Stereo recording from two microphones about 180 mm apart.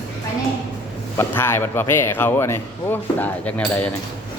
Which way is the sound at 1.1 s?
15° left (ahead or behind).